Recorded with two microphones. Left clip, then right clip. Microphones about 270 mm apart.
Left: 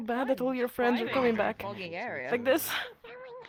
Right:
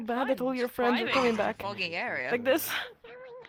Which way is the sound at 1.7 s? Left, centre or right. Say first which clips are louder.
Right 4 dB; right.